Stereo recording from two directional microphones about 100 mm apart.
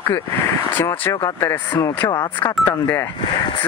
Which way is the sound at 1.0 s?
30° left (ahead or behind).